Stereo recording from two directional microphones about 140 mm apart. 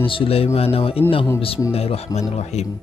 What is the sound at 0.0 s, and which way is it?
A man's voice, 40° left (ahead or behind).